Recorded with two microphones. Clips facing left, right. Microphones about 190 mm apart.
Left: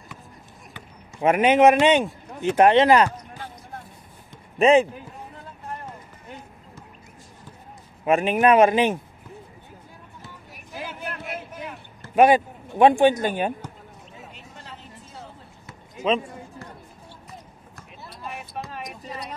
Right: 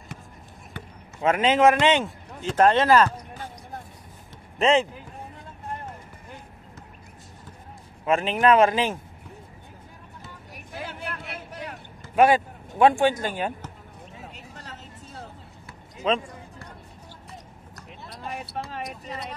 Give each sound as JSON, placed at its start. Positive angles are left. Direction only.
{"t": 1.2, "sound": "a man's voice", "side_deg": 15}
{"t": 4.6, "sound": "speech", "side_deg": 15}
{"t": 8.0, "sound": "a man's voice", "side_deg": 15}
{"t": 12.2, "sound": "a man's voice", "side_deg": 15}